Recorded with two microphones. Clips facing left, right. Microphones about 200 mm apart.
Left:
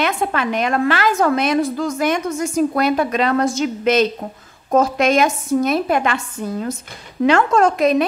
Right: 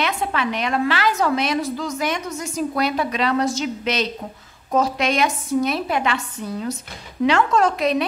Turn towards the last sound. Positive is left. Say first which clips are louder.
# left 4 dB
turn(degrees=50)  # may be behind; listen again after turning